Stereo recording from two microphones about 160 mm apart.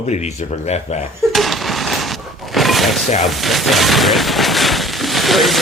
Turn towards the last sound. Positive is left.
turn(degrees=0)  # may be behind; listen again after turning